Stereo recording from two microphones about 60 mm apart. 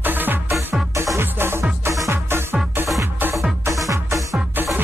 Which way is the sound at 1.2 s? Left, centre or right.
Right.